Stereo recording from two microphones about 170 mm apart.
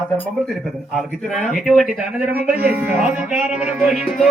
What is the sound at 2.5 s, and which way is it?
Music, 10° right (ahead or behind).